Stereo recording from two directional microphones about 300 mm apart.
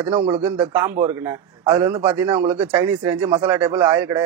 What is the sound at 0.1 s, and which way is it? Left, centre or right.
A man's voice, centre.